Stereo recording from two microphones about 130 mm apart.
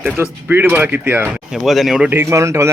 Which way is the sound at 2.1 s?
20° right (ahead or behind).